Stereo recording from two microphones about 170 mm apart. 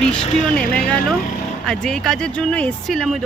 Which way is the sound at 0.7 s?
5° left (ahead or behind).